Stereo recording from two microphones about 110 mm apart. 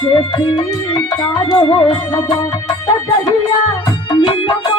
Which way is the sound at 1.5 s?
45° left (ahead or behind).